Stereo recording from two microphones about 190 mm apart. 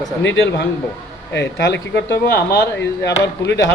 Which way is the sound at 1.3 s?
60° left (ahead or behind).